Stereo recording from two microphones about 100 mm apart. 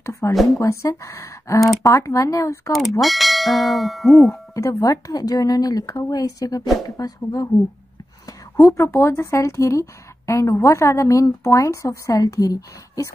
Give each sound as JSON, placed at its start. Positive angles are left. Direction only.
{"t": 0.0, "sound": "a sound", "side_deg": 30}
{"t": 0.6, "sound": "speech", "side_deg": 30}
{"t": 2.7, "sound": "speech", "side_deg": 0}
{"t": 4.6, "sound": "speech", "side_deg": 35}